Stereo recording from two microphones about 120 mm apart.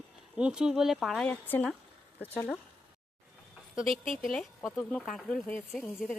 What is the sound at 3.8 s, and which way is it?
Speech, centre (ahead or behind).